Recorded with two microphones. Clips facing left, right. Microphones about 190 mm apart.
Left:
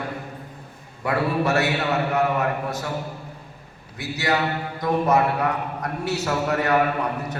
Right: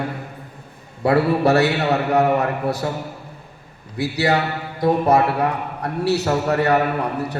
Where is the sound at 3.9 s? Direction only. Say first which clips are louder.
Right 5 dB; 35° right (ahead or behind).